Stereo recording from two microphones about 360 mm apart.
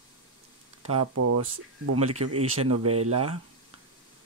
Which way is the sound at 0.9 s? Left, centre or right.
Right.